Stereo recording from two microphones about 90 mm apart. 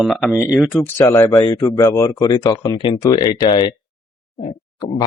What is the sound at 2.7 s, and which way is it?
Speech, 65° left (ahead or behind).